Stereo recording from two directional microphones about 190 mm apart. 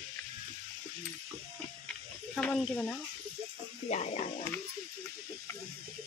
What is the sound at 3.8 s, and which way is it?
Speech, 35° left (ahead or behind).